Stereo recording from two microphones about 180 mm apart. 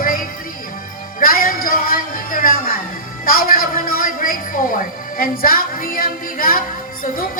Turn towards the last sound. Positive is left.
turn(degrees=50)  # may be behind; listen again after turning